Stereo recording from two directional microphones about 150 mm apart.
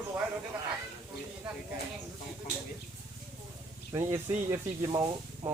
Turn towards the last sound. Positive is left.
turn(degrees=-30)  # may be behind; listen again after turning